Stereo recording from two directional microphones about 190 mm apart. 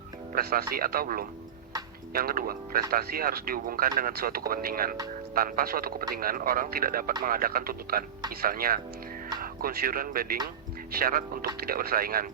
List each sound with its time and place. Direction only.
0.3 s speech: 50° right (ahead or behind)